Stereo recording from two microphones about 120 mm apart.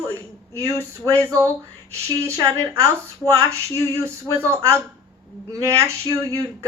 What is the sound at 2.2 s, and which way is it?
Speech, 25° right (ahead or behind).